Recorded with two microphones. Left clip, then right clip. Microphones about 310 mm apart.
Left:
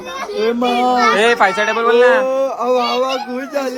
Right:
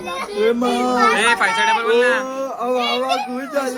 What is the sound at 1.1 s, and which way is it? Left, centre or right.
Speech, centre.